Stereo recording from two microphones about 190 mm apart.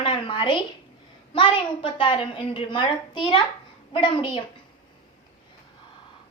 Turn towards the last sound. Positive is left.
turn(degrees=25)  # may be behind; listen again after turning